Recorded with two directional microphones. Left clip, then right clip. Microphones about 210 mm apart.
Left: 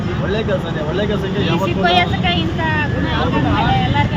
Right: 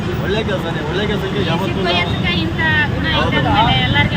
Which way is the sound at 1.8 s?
40° left (ahead or behind).